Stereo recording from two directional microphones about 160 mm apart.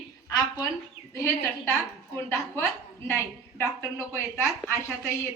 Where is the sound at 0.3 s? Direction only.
25° left (ahead or behind).